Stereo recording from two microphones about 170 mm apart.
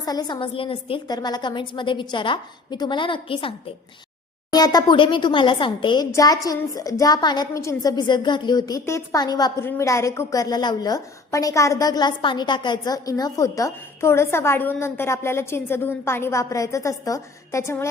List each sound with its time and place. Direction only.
0.0 s a woman's voice: 25° left (ahead or behind)